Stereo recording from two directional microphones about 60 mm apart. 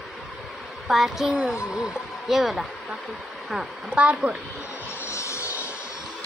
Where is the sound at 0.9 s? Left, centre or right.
Centre.